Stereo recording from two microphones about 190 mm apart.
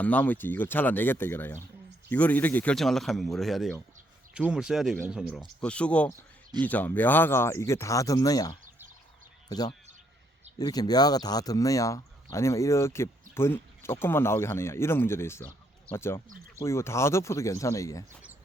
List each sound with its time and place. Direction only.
0.0 s speech: 10° left (ahead or behind)
10.6 s speech: 20° left (ahead or behind)